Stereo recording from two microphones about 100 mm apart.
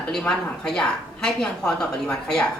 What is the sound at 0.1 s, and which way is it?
A woman's voice, 5° left (ahead or behind).